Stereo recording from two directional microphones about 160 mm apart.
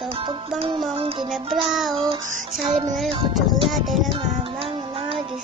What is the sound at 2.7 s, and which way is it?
Music, 40° right (ahead or behind).